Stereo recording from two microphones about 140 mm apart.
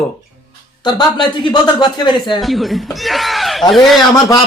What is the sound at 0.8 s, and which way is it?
Speech, 30° left (ahead or behind).